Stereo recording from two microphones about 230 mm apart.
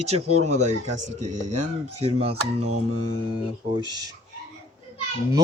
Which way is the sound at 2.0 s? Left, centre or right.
Right.